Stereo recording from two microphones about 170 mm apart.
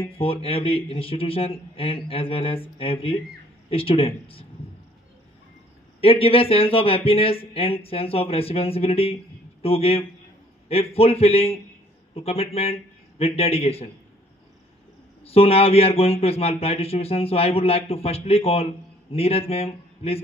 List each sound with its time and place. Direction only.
0.2 s speech: 35° left (ahead or behind)
5.9 s speech: 35° left (ahead or behind)
15.2 s speech: 35° left (ahead or behind)